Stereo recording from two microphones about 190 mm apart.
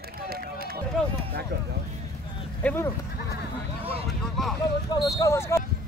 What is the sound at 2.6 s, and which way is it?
Speech, 10° left (ahead or behind).